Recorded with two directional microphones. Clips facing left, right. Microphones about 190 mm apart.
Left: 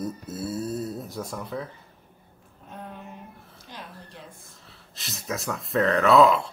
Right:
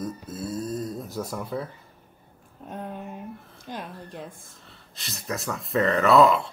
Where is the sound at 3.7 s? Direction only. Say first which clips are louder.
Right 7 dB; 50° right (ahead or behind).